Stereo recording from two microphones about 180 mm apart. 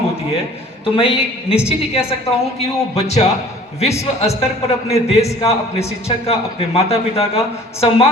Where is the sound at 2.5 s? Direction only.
35° left (ahead or behind).